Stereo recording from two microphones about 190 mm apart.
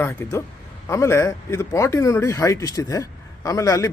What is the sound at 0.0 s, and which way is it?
A man's voice, 10° left (ahead or behind).